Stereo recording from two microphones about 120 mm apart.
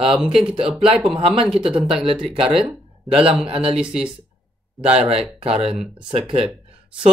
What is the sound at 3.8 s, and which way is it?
Speech, 5° right (ahead or behind).